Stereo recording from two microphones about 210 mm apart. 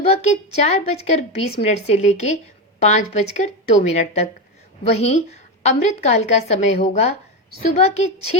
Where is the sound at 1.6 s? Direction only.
30° left (ahead or behind).